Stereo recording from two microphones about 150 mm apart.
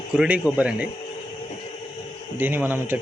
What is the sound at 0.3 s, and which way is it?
Speech, 10° right (ahead or behind).